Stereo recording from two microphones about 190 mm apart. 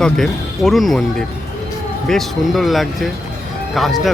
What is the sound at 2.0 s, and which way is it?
Speech, centre (ahead or behind).